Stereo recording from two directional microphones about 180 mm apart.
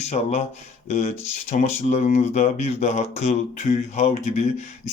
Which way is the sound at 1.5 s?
45° left (ahead or behind).